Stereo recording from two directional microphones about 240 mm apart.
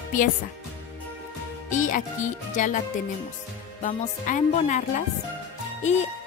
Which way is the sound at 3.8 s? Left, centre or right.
Left.